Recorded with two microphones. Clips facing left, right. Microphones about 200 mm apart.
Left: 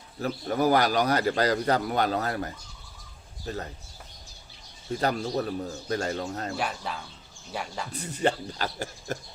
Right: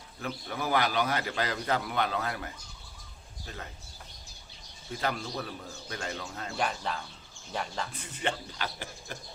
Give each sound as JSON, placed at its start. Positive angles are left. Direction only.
{"t": 0.2, "sound": "a man's voice", "side_deg": 40}
{"t": 4.9, "sound": "a man's voice", "side_deg": 40}
{"t": 6.6, "sound": "speech", "side_deg": 5}
{"t": 7.9, "sound": "a man's voice", "side_deg": 40}